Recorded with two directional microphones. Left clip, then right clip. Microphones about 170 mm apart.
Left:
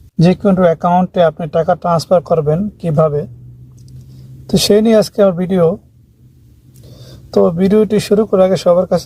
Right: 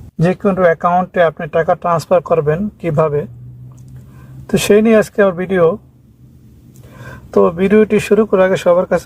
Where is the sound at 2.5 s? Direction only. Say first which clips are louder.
Even; 5° right (ahead or behind).